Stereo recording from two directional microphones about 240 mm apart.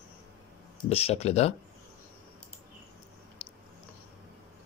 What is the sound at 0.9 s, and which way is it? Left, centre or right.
Speech, left.